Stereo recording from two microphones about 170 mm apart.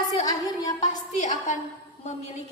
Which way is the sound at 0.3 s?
20° left (ahead or behind).